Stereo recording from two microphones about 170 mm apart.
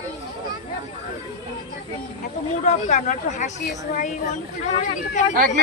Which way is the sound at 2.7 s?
45° left (ahead or behind).